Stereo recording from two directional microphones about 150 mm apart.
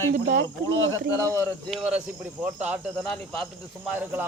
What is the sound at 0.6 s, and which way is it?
Speech, 20° left (ahead or behind).